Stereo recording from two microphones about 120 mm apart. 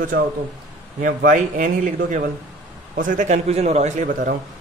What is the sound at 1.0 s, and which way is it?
A man's voice, 90° right.